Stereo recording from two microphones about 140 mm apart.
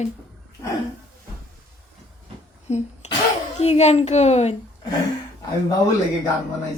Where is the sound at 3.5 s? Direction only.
50° left (ahead or behind).